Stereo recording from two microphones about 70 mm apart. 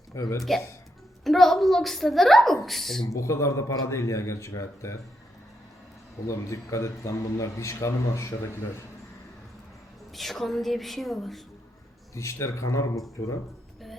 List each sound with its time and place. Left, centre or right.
0.2 s a man's voice: left
1.2 s a woman's voice: centre
3.1 s a man's voice: left
6.2 s a man's voice: left
10.2 s a woman's voice: centre
12.1 s a man's voice: left